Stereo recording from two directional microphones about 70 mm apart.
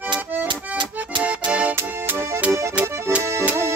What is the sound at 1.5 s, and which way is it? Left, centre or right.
Music, centre.